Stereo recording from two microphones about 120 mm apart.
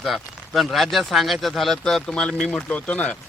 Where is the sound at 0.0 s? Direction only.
Centre (ahead or behind).